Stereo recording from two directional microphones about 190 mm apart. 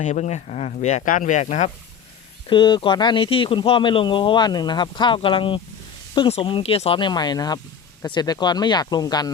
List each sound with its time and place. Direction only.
0.0 s speech: 40° left (ahead or behind)
2.5 s speech: 25° left (ahead or behind)